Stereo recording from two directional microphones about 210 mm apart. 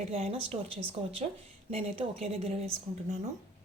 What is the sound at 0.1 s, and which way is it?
Speech, 30° right (ahead or behind).